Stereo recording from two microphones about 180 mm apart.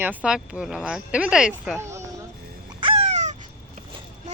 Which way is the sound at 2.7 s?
30° right (ahead or behind).